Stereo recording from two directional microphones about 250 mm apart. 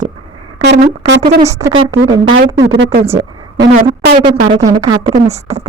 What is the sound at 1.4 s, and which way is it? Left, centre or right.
Speech, centre.